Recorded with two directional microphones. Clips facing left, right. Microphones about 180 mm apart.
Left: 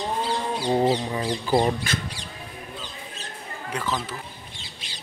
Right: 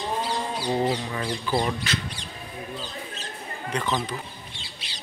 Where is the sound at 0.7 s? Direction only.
25° left (ahead or behind).